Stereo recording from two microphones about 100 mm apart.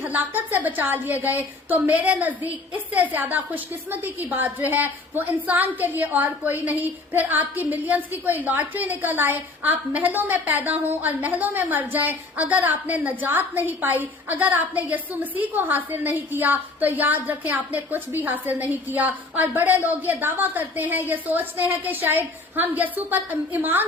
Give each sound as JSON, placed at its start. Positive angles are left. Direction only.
{"t": 0.0, "sound": "a woman's voice", "side_deg": -15}